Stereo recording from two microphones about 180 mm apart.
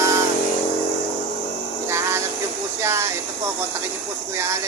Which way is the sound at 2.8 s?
15° right (ahead or behind).